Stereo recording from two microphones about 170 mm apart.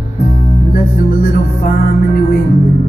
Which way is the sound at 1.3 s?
60° left (ahead or behind).